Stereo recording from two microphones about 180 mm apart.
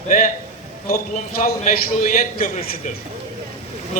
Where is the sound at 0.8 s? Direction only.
55° left (ahead or behind).